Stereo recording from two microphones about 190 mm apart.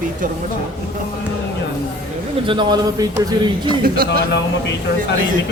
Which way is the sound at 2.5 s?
25° right (ahead or behind).